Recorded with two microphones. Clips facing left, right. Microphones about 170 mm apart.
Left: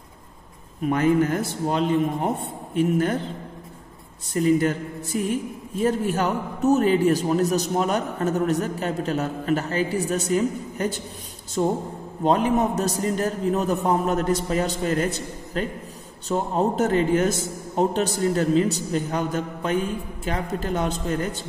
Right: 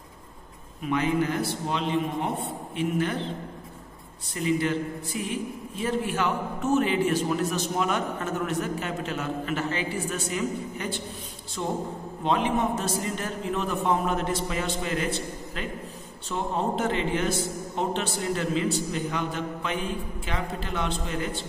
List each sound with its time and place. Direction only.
0.8 s a man's voice: 45° left (ahead or behind)
4.3 s a man's voice: 45° left (ahead or behind)